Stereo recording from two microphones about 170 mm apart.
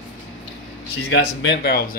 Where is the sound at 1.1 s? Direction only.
90° left; by 1.9 s 70° left (ahead or behind).